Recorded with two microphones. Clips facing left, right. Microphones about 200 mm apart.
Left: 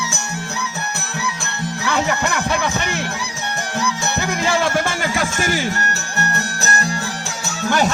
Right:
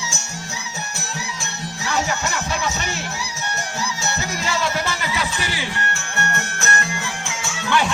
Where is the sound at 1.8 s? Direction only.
60° left (ahead or behind).